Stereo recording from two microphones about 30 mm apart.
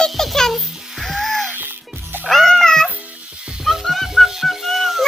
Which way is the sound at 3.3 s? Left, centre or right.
Right.